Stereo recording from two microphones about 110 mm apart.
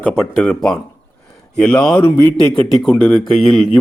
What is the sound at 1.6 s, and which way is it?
Speech, 5° left (ahead or behind).